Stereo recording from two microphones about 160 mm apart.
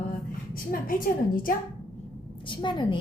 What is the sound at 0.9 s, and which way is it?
Speech, 60° left (ahead or behind).